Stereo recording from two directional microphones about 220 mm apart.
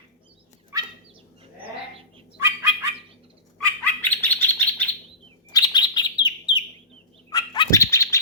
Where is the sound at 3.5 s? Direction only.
10° left (ahead or behind).